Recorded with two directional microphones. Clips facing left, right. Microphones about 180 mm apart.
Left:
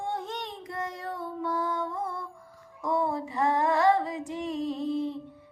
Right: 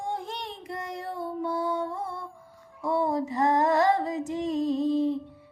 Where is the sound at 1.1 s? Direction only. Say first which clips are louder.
Right 4 dB; 35° right (ahead or behind).